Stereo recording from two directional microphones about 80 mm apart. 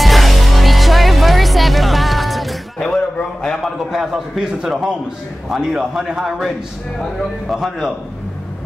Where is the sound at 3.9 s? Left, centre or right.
Centre.